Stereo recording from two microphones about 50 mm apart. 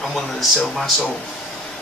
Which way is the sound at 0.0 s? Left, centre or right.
Centre.